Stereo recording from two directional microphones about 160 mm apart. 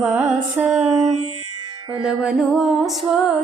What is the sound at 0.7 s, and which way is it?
Music, 40° right (ahead or behind).